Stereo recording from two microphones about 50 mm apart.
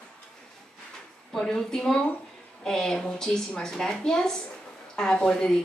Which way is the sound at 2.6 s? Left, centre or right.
Centre.